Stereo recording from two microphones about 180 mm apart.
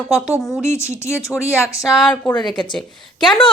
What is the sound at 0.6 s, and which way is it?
Speech, 15° left (ahead or behind).